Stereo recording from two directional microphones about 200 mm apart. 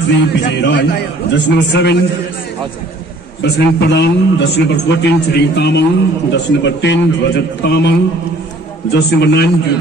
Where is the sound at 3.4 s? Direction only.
55° left (ahead or behind).